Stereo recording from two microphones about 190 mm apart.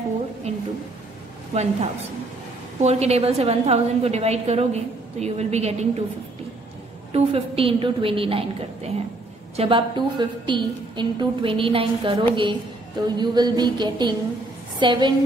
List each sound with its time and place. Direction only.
0.5 s a woman's voice: 35° right (ahead or behind)
7.1 s a woman's voice: 30° right (ahead or behind)